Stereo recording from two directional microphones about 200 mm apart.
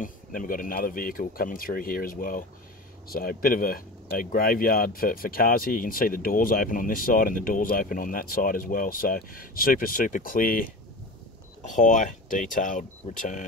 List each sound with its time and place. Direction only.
0.0 s speech: 40° left (ahead or behind)